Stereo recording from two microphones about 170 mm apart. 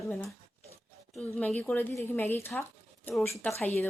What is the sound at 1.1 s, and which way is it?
A woman's voice, 5° left (ahead or behind).